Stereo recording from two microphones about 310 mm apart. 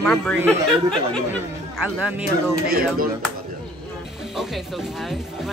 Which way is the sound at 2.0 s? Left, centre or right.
Centre.